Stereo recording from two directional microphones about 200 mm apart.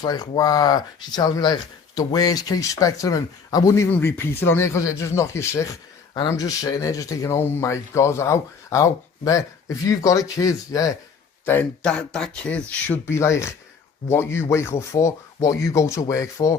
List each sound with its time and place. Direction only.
0.0 s speech: 20° left (ahead or behind)
11.4 s speech: 5° left (ahead or behind)